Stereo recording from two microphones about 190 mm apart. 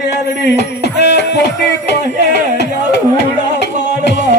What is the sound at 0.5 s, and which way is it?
Speech, 65° left (ahead or behind).